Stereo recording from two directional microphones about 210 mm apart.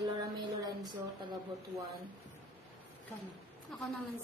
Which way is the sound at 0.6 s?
20° right (ahead or behind).